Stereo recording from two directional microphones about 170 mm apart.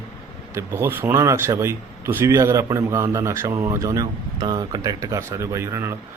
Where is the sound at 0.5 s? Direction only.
15° right (ahead or behind).